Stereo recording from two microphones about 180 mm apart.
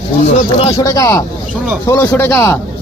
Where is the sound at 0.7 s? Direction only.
20° left (ahead or behind).